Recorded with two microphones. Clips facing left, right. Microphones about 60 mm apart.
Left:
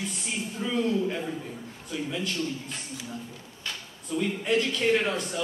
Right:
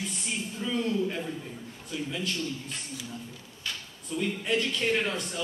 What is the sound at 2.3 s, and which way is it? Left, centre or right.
Speech, centre.